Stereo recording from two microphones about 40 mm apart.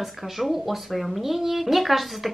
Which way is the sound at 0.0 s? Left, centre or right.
Centre.